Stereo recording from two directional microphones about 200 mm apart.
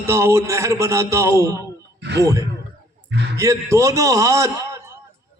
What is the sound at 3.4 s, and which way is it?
A man's voice, 15° right (ahead or behind).